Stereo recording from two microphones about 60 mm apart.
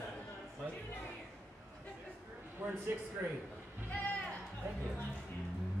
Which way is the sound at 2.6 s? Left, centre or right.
Right.